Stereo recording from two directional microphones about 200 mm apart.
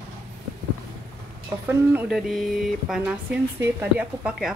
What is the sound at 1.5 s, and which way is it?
Speech, 15° right (ahead or behind).